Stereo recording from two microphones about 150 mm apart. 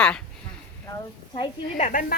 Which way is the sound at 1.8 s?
55° left (ahead or behind).